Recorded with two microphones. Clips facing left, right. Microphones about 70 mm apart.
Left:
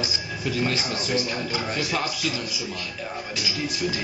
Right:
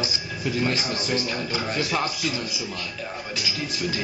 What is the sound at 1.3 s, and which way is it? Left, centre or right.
Speech, centre.